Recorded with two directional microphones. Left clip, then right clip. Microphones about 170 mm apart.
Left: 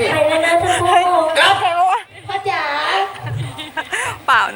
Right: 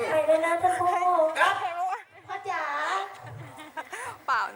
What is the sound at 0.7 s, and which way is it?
Speech, 10° left (ahead or behind).